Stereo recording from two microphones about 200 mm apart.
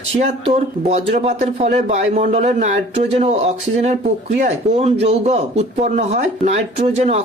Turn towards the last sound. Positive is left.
turn(degrees=-35)  # may be behind; listen again after turning